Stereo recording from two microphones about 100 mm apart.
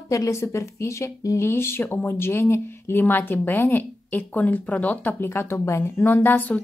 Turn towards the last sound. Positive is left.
turn(degrees=15)  # may be behind; listen again after turning